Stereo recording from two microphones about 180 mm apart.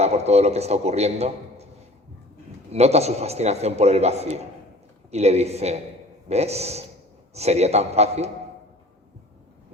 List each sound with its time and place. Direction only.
0.0 s a man's voice: 35° right (ahead or behind)
2.7 s a man's voice: 35° right (ahead or behind)